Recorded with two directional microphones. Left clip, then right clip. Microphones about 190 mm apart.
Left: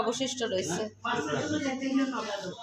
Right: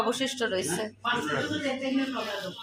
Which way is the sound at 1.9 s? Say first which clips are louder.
Even; 25° left (ahead or behind).